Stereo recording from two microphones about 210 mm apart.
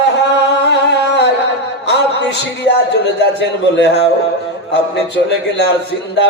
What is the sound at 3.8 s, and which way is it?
Speech, 55° left (ahead or behind).